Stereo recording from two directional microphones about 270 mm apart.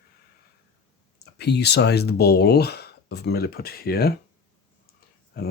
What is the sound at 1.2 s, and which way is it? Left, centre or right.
Speech, left.